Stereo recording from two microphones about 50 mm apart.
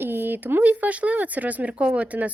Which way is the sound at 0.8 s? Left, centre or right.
Right.